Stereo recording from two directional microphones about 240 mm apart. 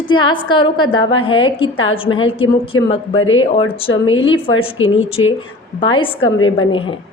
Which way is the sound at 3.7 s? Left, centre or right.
Left.